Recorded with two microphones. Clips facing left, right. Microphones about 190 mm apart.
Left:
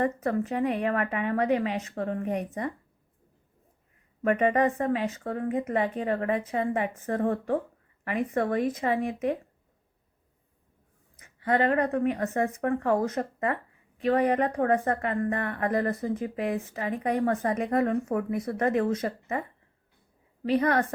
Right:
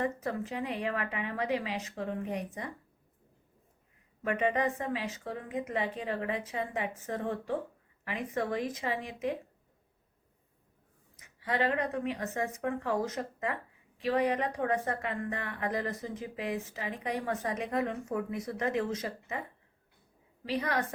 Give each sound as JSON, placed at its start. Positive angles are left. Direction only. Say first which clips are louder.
{"t": 0.0, "sound": "a woman's voice", "louder": "left 6 dB", "side_deg": 55}
{"t": 4.2, "sound": "a woman's voice", "louder": "left 6 dB", "side_deg": 55}
{"t": 11.3, "sound": "a woman's voice", "louder": "left 6 dB", "side_deg": 55}
{"t": 20.5, "sound": "a woman's voice", "louder": "left 8 dB", "side_deg": 55}